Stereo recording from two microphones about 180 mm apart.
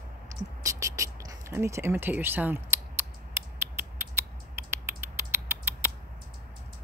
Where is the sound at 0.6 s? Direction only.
15° right (ahead or behind).